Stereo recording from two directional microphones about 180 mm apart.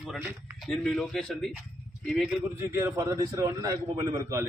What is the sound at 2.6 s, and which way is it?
A man's voice, 15° right (ahead or behind).